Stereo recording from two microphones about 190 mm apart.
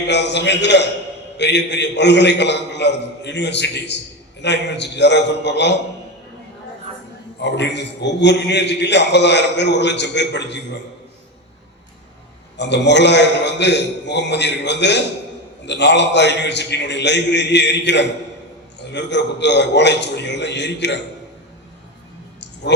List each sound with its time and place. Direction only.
0.1 s a man's voice: 65° left (ahead or behind)
7.4 s a man's voice: 65° left (ahead or behind)
12.5 s a man's voice: 65° left (ahead or behind)